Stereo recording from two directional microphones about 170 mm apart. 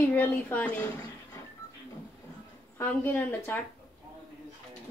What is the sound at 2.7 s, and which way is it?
Speech, 10° left (ahead or behind).